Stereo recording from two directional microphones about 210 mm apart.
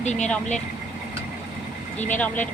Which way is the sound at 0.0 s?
35° left (ahead or behind).